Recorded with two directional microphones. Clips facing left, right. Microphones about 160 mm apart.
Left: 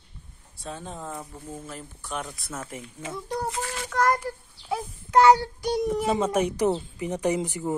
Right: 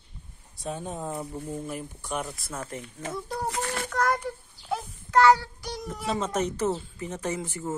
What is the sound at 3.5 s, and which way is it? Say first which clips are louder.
Child singing: right 1 dB; 60° right (ahead or behind).